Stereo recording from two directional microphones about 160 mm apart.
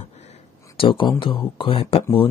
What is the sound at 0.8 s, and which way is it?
Speech, 30° left (ahead or behind).